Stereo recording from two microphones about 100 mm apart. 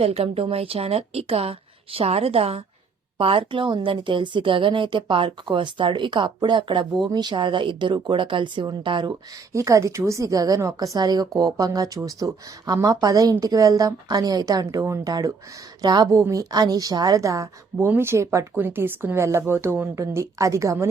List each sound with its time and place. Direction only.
0.0 s a woman's voice: 75° right (ahead or behind)
3.2 s speech: 65° right (ahead or behind)
9.5 s a woman's voice: 30° right (ahead or behind)